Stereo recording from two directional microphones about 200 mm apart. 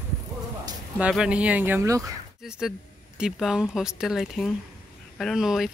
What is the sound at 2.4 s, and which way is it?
Speech, 5° right (ahead or behind).